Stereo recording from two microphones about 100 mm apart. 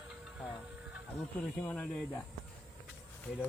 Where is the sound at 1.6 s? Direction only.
20° left (ahead or behind).